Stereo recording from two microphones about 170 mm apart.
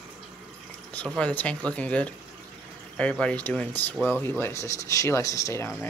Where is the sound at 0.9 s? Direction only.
5° left (ahead or behind).